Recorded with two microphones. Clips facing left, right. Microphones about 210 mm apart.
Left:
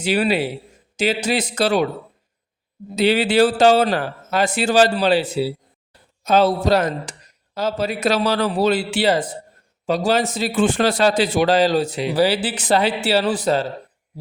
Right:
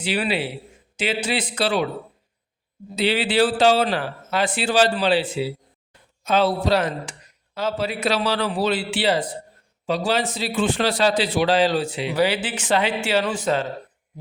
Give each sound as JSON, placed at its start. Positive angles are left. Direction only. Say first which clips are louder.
{"t": 0.0, "sound": "speech", "louder": "left 5 dB", "side_deg": 45}
{"t": 2.9, "sound": "a man's voice", "louder": "left 4 dB", "side_deg": 45}